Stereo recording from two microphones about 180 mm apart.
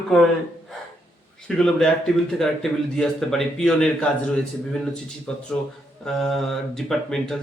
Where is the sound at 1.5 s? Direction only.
5° left (ahead or behind).